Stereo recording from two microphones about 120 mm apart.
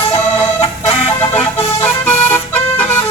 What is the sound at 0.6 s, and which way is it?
Chicken, 60° left (ahead or behind).